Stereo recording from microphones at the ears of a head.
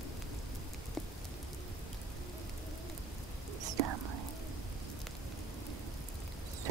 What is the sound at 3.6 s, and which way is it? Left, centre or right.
Whispering, right.